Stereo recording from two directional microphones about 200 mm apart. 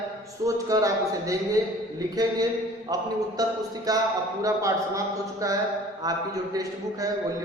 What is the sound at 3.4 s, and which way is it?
A man's voice, 20° right (ahead or behind).